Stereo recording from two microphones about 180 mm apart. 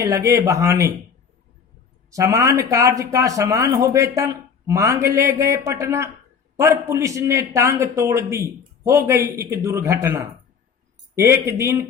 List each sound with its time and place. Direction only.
0.0 s a man's voice: 15° right (ahead or behind)
2.0 s a man's voice: 15° right (ahead or behind)